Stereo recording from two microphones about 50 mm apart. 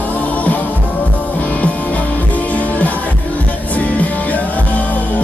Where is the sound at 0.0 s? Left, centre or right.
Left.